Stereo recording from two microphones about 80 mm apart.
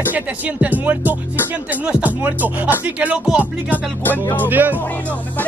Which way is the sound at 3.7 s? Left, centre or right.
Left.